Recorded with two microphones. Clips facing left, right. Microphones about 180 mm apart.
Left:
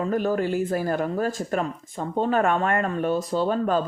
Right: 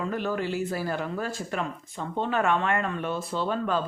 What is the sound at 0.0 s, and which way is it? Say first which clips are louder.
Speech: left 5 dB; 40° left (ahead or behind).